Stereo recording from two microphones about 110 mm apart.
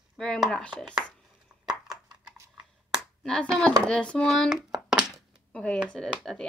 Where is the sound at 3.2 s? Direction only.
5° left (ahead or behind).